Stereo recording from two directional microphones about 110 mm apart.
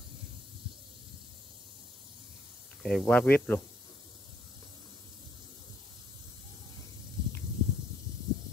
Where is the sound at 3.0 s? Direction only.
15° left (ahead or behind).